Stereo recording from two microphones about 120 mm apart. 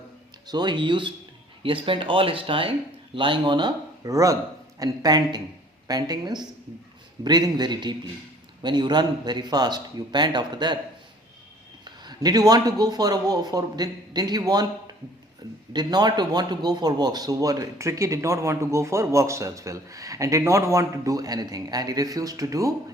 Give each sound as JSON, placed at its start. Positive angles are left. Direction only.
{"t": 0.4, "sound": "speech", "side_deg": -35}
{"t": 11.9, "sound": "speech", "side_deg": -35}
{"t": 15.7, "sound": "a man's voice", "side_deg": -35}